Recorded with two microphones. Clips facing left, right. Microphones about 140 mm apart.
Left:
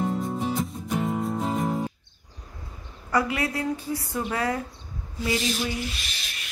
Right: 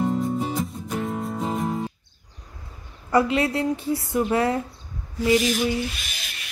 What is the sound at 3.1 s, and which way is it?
Speech, 25° right (ahead or behind).